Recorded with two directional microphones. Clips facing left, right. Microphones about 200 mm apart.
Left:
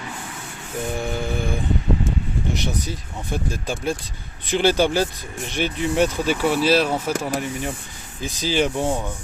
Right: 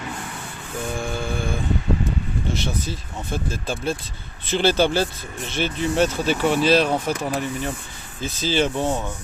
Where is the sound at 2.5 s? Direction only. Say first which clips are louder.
Even; 15° left (ahead or behind).